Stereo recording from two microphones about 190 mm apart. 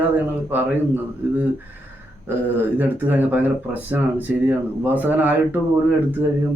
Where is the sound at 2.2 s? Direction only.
10° right (ahead or behind).